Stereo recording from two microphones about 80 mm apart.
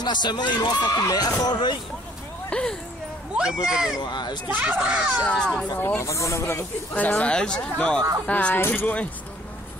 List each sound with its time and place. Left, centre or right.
0.0 s speech: left
1.4 s speech: left
2.5 s speech: centre
3.3 s a child's voice: centre
4.0 s speech: left
4.6 s a child's voice: centre
5.2 s speech: centre
5.8 s speech: left
6.9 s speech: centre
8.5 s speech: left